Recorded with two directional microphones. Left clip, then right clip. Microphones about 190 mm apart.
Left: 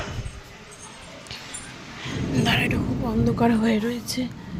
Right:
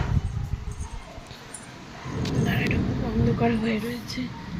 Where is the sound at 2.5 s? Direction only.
15° left (ahead or behind).